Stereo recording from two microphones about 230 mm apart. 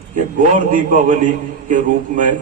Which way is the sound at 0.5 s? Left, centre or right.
Right.